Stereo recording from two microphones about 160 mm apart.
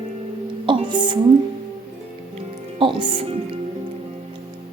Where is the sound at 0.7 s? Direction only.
30° right (ahead or behind).